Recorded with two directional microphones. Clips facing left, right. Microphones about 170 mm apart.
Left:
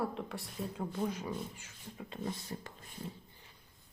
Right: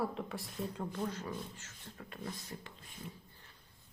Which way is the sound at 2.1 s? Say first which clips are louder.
Left 5 dB; 20° left (ahead or behind).